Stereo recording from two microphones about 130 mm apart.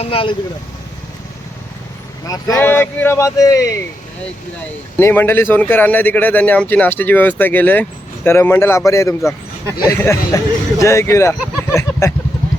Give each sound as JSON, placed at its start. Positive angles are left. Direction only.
{"t": 0.0, "sound": "speech", "side_deg": 45}
{"t": 2.6, "sound": "speech", "side_deg": 15}
{"t": 4.9, "sound": "a man's voice", "side_deg": 20}